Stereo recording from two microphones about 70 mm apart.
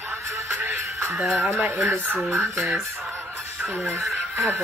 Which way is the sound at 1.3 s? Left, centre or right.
Right.